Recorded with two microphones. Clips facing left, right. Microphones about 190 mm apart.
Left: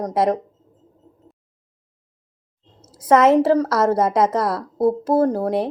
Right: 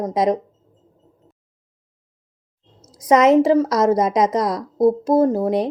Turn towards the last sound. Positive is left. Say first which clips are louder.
# right 2 dB
turn(degrees=-15)  # may be behind; listen again after turning